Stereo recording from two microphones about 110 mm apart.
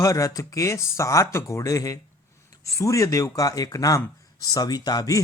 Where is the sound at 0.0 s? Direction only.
30° left (ahead or behind).